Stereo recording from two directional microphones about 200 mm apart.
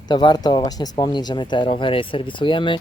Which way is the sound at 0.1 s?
20° left (ahead or behind).